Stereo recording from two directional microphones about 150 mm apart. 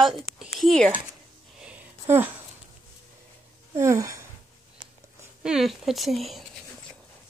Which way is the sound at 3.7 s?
20° right (ahead or behind).